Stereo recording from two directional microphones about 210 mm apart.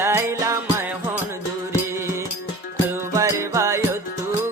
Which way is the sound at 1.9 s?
15° right (ahead or behind).